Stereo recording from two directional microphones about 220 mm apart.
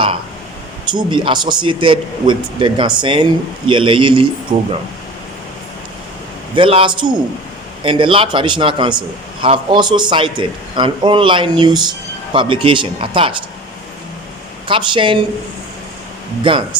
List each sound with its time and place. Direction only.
0.9 s a man's voice: 20° right (ahead or behind)
4.5 s speech: 35° right (ahead or behind)
6.6 s a man's voice: 25° right (ahead or behind)
14.7 s a man's voice: 25° right (ahead or behind)
16.4 s a man's voice: 20° right (ahead or behind)